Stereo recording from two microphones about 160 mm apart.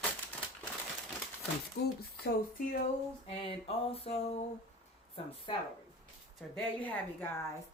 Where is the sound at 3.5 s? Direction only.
35° left (ahead or behind).